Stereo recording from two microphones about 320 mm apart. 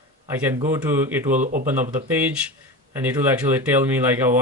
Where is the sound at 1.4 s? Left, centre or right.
Right.